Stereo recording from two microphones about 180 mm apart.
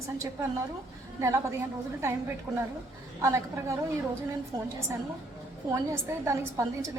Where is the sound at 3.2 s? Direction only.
15° right (ahead or behind).